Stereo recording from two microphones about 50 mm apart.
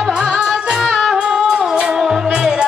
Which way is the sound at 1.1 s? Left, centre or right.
Centre.